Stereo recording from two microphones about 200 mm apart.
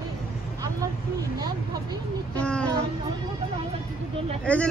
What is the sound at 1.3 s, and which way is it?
Vehicle, 20° right (ahead or behind).